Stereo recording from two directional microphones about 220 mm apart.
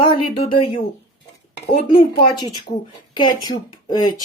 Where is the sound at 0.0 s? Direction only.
25° left (ahead or behind).